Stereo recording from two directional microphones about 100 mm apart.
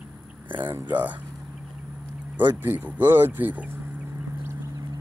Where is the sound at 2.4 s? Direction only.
20° right (ahead or behind).